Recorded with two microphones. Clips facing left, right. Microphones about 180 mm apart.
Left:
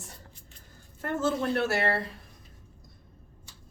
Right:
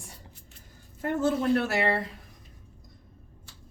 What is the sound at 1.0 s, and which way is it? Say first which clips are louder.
A woman's voice: right 2 dB; 15° right (ahead or behind).